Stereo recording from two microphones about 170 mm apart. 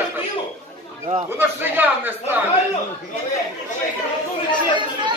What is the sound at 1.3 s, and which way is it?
A man's voice, 10° right (ahead or behind).